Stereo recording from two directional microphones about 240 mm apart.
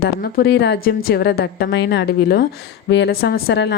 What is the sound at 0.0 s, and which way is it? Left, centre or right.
A woman's voice, left.